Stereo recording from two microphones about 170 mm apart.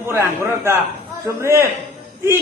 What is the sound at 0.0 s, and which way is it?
A man's voice, 15° right (ahead or behind).